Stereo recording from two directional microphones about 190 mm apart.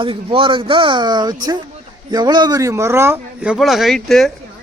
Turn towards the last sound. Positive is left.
turn(degrees=0)  # may be behind; listen again after turning